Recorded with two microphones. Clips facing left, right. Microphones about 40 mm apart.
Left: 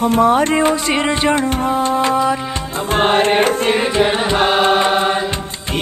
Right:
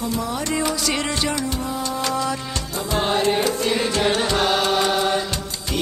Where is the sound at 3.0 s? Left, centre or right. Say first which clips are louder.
Left 7 dB; left.